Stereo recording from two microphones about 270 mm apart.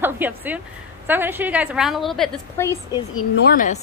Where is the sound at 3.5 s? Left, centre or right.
Left.